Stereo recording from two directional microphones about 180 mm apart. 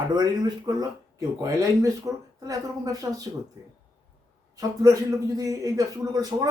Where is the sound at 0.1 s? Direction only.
25° right (ahead or behind).